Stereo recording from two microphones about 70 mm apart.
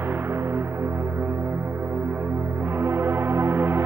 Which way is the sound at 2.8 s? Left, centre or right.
Right.